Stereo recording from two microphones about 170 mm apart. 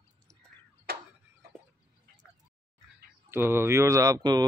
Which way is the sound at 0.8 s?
65° right (ahead or behind).